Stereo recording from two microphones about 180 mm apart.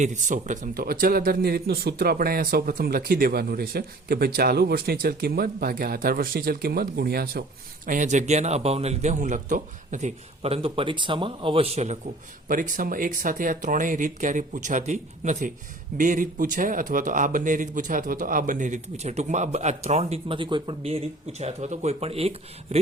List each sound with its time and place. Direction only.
0.0 s a man's voice: 45° right (ahead or behind); by 7.4 s 60° right (ahead or behind)
7.9 s speech: 45° right (ahead or behind)
12.5 s speech: 50° right (ahead or behind)